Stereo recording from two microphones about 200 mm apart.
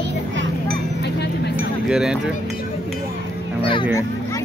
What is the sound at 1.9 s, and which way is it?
Speech, 5° right (ahead or behind).